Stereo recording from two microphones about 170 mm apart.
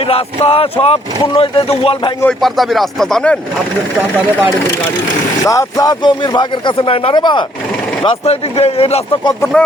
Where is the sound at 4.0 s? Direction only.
10° right (ahead or behind).